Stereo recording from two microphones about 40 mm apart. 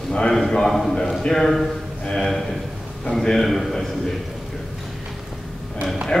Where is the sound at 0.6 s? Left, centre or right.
Centre.